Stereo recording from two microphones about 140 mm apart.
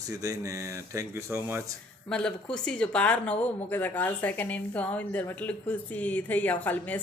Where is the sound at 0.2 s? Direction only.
25° right (ahead or behind).